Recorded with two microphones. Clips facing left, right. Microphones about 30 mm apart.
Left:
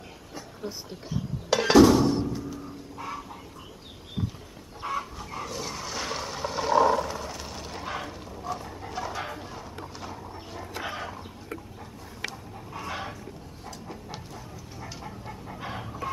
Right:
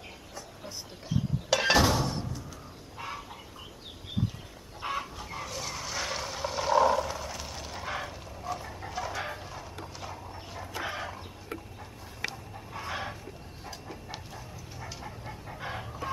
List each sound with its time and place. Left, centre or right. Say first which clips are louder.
1.0 s a sound: right 2 dB; centre
1.6 s music: left 8 dB; centre
2.0 s music: left 9 dB; centre
3.0 s chicken: left 2 dB; centre
4.8 s chicken: left 2 dB; right
5.2 s a sound: left 3 dB; centre
8.5 s dog: left 2 dB; centre
12.7 s chicken: left 1 dB; centre
14.1 s a sound: left 2 dB; centre